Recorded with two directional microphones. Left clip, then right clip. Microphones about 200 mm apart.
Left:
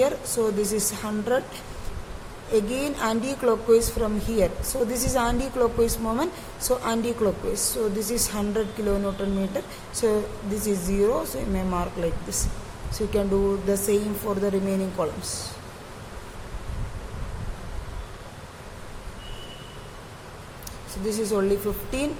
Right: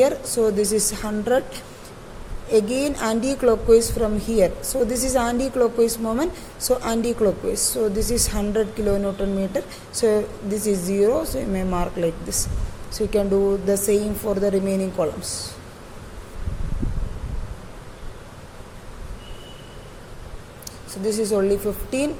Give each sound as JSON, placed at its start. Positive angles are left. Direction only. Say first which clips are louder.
{"t": 0.0, "sound": "a woman's voice", "louder": "right 4 dB", "side_deg": -20}
{"t": 20.9, "sound": "speech", "louder": "right 4 dB", "side_deg": -15}